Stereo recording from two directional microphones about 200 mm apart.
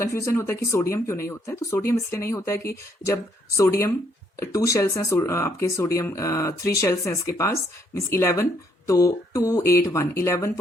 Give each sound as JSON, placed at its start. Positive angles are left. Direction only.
{"t": 0.1, "sound": "speech", "side_deg": 15}
{"t": 3.6, "sound": "speech", "side_deg": 15}